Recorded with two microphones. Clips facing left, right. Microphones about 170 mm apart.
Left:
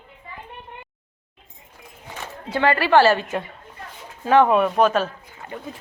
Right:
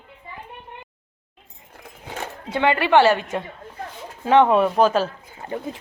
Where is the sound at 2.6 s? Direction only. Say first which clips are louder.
Even; 15° right (ahead or behind).